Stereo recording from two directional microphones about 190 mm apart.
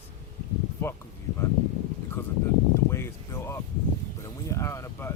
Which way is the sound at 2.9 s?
15° left (ahead or behind).